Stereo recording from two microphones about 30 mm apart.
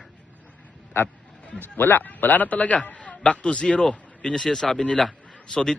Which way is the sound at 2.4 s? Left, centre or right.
Left.